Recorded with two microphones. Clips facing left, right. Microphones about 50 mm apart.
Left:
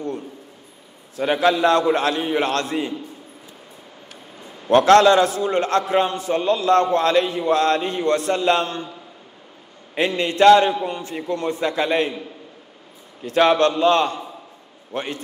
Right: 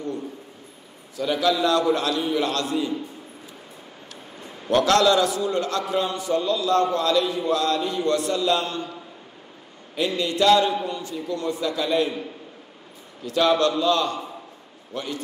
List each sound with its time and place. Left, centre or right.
1.1 s a man's voice: left
4.6 s a man's voice: left
9.9 s a man's voice: left
13.2 s a man's voice: left